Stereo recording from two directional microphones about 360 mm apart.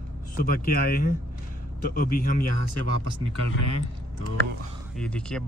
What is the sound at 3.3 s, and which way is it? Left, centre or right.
Speech, right.